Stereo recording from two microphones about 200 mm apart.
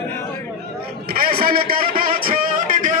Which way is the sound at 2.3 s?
45° right (ahead or behind).